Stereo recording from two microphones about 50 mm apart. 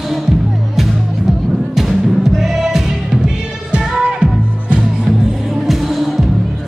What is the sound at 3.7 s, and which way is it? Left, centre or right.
Music, centre.